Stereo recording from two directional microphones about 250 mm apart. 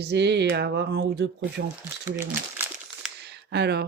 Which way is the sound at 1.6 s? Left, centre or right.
Right.